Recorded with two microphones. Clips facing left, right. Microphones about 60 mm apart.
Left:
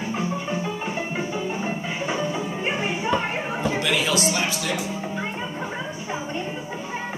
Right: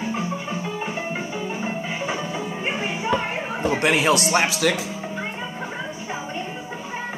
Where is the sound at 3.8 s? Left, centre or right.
Right.